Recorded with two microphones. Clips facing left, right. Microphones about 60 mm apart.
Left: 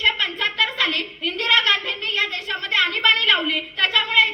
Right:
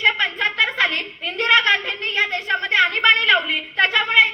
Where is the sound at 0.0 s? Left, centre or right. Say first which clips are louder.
Right 3 dB; right.